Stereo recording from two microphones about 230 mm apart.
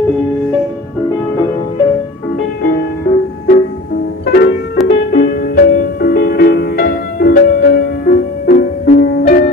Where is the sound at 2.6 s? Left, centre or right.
Left.